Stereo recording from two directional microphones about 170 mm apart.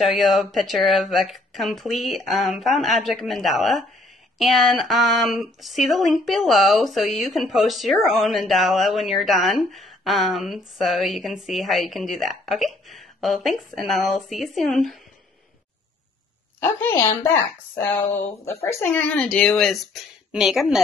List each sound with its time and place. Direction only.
0.0 s speech: centre (ahead or behind)
16.5 s a woman's voice: 15° left (ahead or behind)
18.4 s a woman's voice: 15° left (ahead or behind); by 20.8 s 5° right (ahead or behind)